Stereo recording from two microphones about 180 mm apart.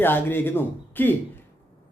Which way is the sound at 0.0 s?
10° left (ahead or behind).